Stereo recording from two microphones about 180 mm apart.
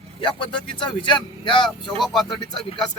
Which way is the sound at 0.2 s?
25° left (ahead or behind).